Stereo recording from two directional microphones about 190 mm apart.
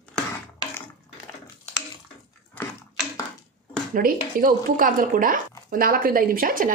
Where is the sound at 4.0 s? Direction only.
50° right (ahead or behind).